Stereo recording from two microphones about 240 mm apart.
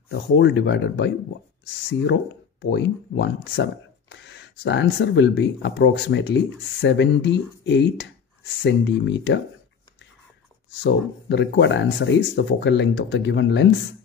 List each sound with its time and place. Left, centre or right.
0.1 s speech: left
2.6 s speech: left
10.8 s speech: left